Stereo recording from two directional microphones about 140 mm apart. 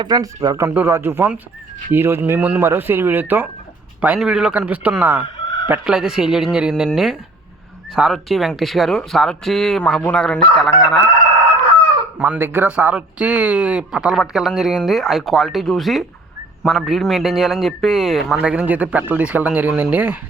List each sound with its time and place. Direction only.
0.0 s speech: 30° right (ahead or behind); by 10.7 s 5° left (ahead or behind)
12.2 s speech: 10° right (ahead or behind)